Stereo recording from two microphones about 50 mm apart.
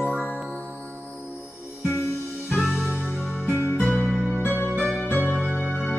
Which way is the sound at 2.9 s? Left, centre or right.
Left.